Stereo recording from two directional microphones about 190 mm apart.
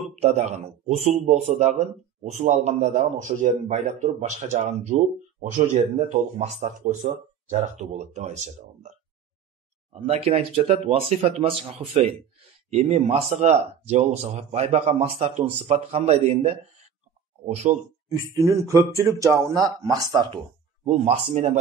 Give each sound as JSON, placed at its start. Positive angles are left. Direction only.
{"t": 0.2, "sound": "a man's voice", "side_deg": -35}
{"t": 9.9, "sound": "a man's voice", "side_deg": -30}
{"t": 17.7, "sound": "a man's voice", "side_deg": -40}
{"t": 18.3, "sound": "speech", "side_deg": -15}